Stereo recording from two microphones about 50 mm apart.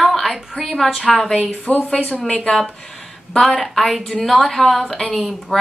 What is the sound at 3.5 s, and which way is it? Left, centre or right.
A woman's voice, centre.